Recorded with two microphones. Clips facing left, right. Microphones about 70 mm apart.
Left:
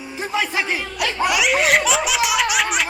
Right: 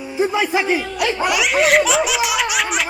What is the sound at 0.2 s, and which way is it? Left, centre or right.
Speech, centre.